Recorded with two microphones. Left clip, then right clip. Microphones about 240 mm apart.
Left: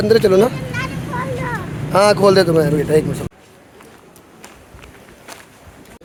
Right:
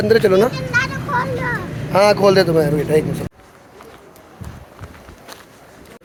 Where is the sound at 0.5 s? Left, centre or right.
Right.